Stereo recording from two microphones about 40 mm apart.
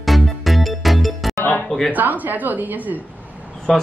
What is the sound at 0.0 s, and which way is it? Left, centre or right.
Music, centre.